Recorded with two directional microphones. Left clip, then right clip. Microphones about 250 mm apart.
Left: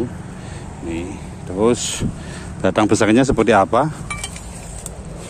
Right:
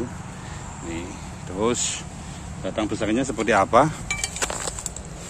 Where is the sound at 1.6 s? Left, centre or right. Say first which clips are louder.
Left 6 dB; centre.